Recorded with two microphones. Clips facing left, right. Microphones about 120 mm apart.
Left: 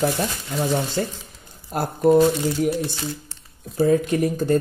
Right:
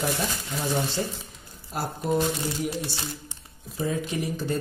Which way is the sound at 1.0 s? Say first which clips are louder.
Left 5 dB; 65° left (ahead or behind).